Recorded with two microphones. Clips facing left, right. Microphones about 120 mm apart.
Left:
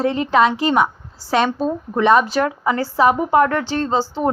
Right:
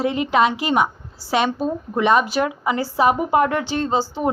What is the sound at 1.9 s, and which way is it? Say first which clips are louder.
Speech: left 3 dB; 10° right (ahead or behind).